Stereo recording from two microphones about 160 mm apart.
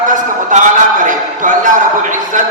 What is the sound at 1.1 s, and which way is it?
Speech, 55° right (ahead or behind).